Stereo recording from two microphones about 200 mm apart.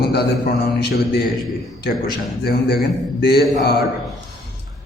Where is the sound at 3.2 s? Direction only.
50° left (ahead or behind).